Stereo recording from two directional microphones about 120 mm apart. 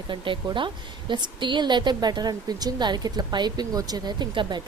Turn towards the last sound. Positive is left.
turn(degrees=-40)  # may be behind; listen again after turning